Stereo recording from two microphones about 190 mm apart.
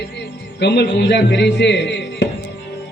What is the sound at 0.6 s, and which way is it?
A man's voice, 60° left (ahead or behind).